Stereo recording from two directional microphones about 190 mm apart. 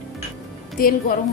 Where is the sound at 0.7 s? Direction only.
50° left (ahead or behind).